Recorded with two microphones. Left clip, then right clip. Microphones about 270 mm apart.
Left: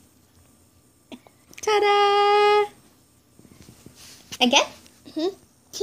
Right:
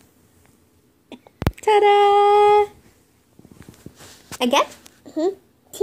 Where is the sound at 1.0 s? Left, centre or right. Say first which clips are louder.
Right 16 dB; centre.